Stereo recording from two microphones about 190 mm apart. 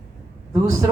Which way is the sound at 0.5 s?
15° right (ahead or behind).